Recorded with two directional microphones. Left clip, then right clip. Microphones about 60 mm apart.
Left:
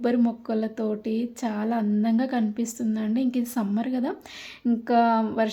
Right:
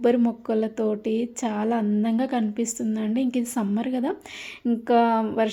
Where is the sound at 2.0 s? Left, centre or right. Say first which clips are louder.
Right 1 dB; centre.